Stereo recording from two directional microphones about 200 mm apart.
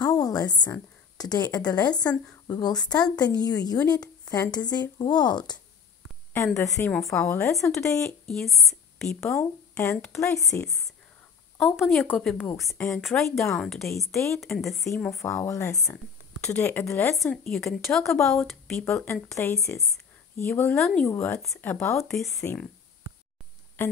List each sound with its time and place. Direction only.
0.0 s a woman's voice: 20° left (ahead or behind)
6.9 s a woman's voice: centre (ahead or behind)
7.2 s speech: 15° left (ahead or behind)
8.0 s speech: centre (ahead or behind)
9.2 s a woman's voice: 15° left (ahead or behind)
15.2 s a woman's voice: 15° left (ahead or behind)
18.9 s speech: 15° left (ahead or behind)
20.7 s a woman's voice: centre (ahead or behind)